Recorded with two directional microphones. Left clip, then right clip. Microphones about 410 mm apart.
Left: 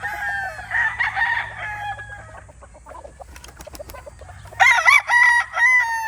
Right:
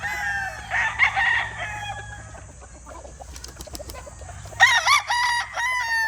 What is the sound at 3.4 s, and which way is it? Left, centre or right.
Bird, centre.